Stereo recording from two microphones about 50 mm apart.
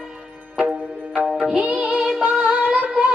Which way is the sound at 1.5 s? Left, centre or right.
Right.